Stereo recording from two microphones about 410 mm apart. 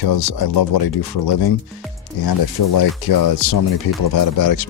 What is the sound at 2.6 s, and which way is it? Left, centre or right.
Speech, left.